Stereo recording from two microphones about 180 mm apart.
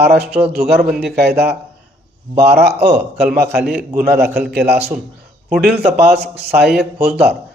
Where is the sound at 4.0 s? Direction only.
60° right (ahead or behind).